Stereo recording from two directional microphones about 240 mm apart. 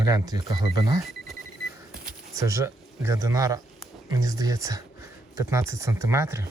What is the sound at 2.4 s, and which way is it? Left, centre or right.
Speech, centre.